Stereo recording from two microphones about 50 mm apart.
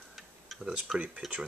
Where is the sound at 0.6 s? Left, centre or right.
Centre.